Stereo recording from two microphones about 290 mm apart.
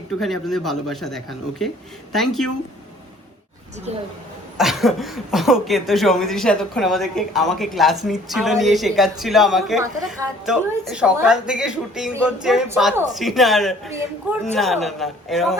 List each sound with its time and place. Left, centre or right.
0.1 s a woman's voice: centre
4.5 s a woman's voice: centre